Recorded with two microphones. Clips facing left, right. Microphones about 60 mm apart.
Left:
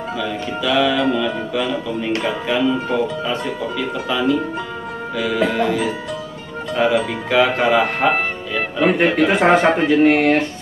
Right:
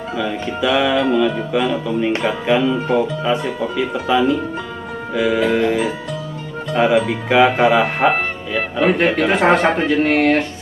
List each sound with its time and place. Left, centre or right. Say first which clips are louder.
0.6 s speech: right 1 dB; centre
5.6 s music: right 2 dB; right
6.7 s speech: right 2 dB; centre